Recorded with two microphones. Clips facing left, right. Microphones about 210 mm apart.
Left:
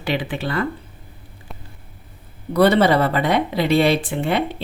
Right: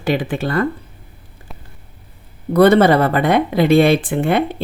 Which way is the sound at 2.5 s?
50° right (ahead or behind).